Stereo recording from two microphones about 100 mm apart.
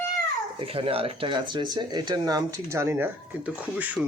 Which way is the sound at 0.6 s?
70° right (ahead or behind).